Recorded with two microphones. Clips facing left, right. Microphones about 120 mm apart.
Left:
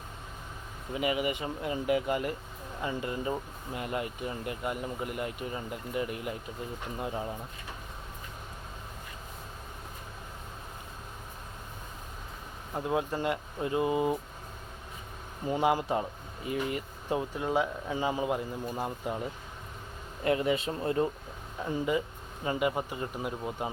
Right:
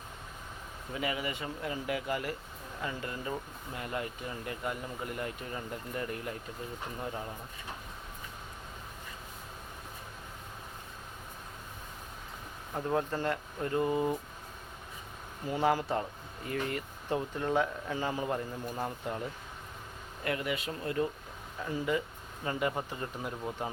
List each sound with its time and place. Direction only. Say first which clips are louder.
0.9 s speech: left 5 dB; 20° left (ahead or behind)
12.7 s speech: left 1 dB; 10° left (ahead or behind)
15.4 s speech: left 2 dB; 15° left (ahead or behind)
20.2 s speech: left 6 dB; 25° left (ahead or behind); by 23.7 s 10° left (ahead or behind)